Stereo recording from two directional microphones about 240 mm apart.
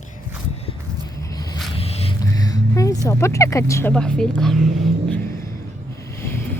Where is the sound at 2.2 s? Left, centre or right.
Centre.